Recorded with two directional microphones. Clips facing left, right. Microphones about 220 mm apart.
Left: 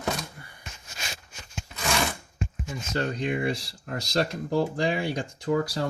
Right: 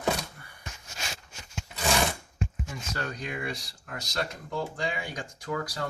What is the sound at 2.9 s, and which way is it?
Speech, 25° left (ahead or behind).